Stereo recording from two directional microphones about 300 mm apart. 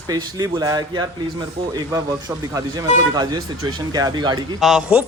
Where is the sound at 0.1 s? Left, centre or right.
Centre.